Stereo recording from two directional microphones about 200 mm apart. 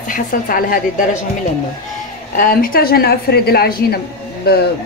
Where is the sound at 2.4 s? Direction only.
45° left (ahead or behind).